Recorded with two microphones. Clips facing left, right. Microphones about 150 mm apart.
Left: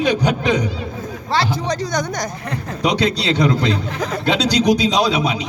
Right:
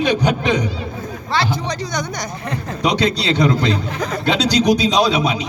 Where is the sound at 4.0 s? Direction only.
5° left (ahead or behind).